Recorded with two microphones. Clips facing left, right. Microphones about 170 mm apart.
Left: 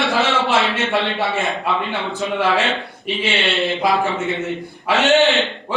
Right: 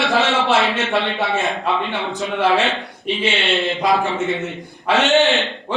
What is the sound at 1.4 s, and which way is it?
Speech, 20° right (ahead or behind).